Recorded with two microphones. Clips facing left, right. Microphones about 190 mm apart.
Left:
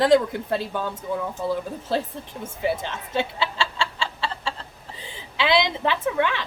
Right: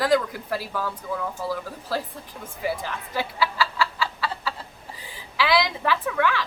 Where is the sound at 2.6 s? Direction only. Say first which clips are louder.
Left 2 dB; 25° left (ahead or behind).